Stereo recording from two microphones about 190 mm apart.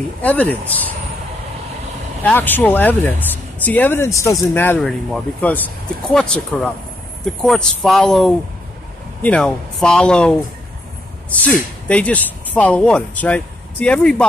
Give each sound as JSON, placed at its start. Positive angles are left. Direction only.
{"t": 0.2, "sound": "speech", "side_deg": 10}
{"t": 2.2, "sound": "speech", "side_deg": 10}